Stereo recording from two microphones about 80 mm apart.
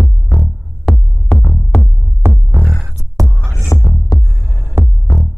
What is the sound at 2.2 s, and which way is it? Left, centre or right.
Music, right.